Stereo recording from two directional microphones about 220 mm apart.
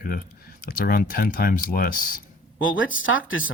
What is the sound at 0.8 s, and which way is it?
Speech, 40° left (ahead or behind).